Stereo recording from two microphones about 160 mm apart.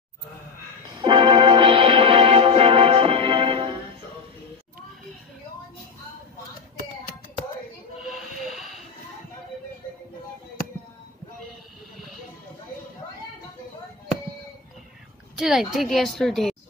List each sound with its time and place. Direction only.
0.9 s music: 30° right (ahead or behind)
8.0 s a sound: centre (ahead or behind)
15.3 s a woman's voice: 5° right (ahead or behind)